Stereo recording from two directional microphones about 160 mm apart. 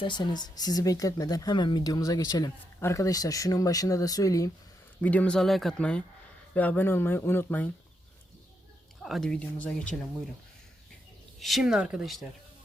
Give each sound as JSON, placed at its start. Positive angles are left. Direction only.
{"t": 0.0, "sound": "speech", "side_deg": 30}
{"t": 4.9, "sound": "speech", "side_deg": 10}
{"t": 9.0, "sound": "speech", "side_deg": 0}
{"t": 11.3, "sound": "speech", "side_deg": 0}